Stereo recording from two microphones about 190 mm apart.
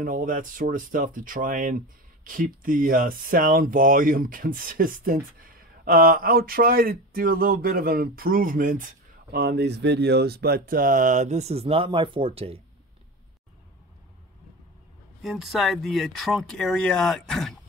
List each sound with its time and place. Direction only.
0.0 s speech: 45° right (ahead or behind); by 12.5 s 30° right (ahead or behind)
15.2 s speech: centre (ahead or behind)